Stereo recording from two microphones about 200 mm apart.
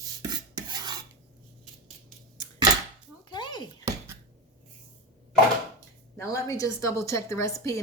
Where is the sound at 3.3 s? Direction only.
20° left (ahead or behind).